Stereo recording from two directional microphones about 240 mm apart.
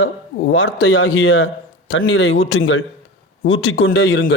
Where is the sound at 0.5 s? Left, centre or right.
Left.